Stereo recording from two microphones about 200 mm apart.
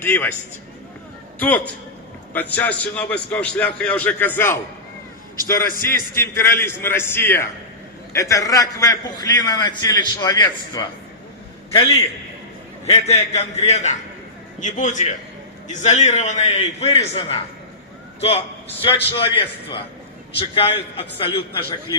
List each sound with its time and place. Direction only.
0.0 s a man's voice: 10° left (ahead or behind)
1.4 s a man's voice: 10° left (ahead or behind); by 21.6 s 25° left (ahead or behind)